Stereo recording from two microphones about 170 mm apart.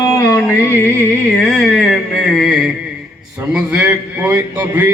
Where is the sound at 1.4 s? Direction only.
5° left (ahead or behind).